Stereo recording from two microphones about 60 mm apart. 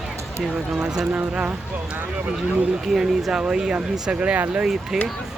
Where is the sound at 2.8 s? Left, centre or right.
Centre.